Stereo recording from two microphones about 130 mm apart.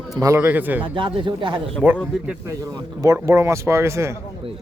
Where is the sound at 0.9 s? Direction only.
40° right (ahead or behind).